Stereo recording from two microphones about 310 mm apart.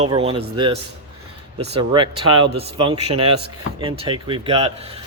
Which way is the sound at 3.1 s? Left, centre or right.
Right.